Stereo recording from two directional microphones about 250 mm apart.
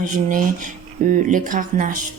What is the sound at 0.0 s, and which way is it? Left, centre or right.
A woman's voice, right.